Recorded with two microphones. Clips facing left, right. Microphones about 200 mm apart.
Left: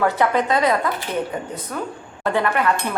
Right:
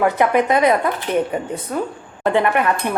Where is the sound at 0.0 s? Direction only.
20° right (ahead or behind).